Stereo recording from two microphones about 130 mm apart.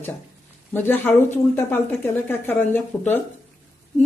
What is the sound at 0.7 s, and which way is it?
Speech, 15° left (ahead or behind).